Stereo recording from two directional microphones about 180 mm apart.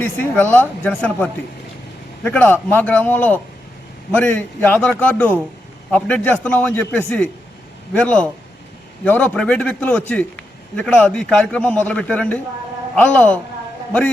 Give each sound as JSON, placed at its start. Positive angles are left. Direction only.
{"t": 0.3, "sound": "a man's voice", "side_deg": 10}